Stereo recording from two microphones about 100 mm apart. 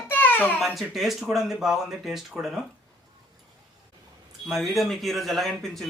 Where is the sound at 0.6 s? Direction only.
Centre (ahead or behind).